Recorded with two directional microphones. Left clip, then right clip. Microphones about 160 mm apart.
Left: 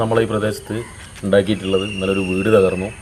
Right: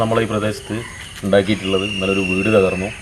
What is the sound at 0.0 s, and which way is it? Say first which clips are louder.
Speech: even; 20° left (ahead or behind).